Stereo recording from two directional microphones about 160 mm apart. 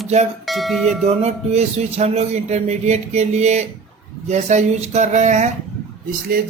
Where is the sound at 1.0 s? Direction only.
45° right (ahead or behind).